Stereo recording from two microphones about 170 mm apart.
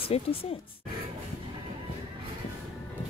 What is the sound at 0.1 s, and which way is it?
Speech, 35° left (ahead or behind).